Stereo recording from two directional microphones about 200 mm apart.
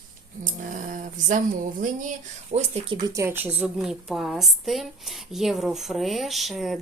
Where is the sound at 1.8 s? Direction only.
40° right (ahead or behind).